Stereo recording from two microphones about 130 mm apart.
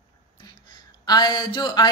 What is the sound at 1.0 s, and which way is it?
Speech, 30° left (ahead or behind).